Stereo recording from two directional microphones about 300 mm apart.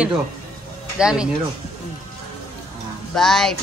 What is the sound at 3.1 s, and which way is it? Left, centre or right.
Speech, centre.